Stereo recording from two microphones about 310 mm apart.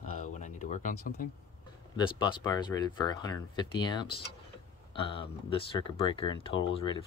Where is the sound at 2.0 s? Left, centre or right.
Centre.